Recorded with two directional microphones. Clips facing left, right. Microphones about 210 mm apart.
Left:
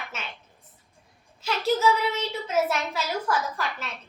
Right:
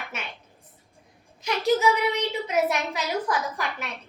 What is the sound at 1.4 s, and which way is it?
A child's voice, 15° right (ahead or behind).